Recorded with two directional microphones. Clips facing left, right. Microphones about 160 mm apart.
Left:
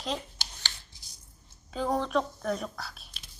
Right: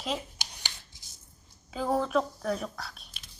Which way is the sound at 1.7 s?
5° right (ahead or behind).